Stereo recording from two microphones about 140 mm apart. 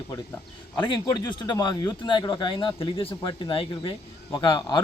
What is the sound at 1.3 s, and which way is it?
A man's voice, 30° left (ahead or behind).